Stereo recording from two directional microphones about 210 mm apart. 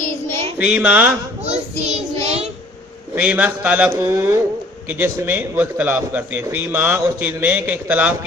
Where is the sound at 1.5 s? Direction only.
30° right (ahead or behind).